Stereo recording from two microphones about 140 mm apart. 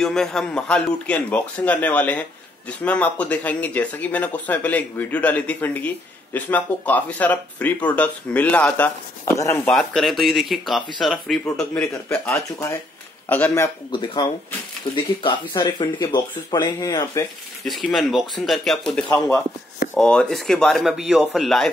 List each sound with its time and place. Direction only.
0.0 s speech: 5° left (ahead or behind)
9.2 s speech: 20° left (ahead or behind)
9.7 s speech: centre (ahead or behind)
13.9 s speech: 35° left (ahead or behind)
17.6 s speech: centre (ahead or behind)
19.0 s speech: 20° left (ahead or behind)
19.9 s speech: 5° left (ahead or behind)